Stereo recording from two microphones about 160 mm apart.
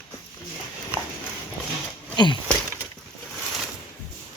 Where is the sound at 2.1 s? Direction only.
30° left (ahead or behind).